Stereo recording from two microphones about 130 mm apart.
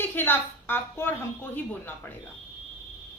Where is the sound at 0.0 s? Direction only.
15° left (ahead or behind).